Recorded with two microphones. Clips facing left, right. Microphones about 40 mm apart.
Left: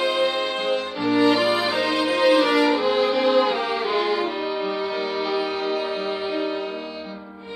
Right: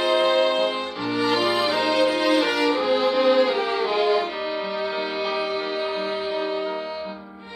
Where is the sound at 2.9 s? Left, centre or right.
Centre.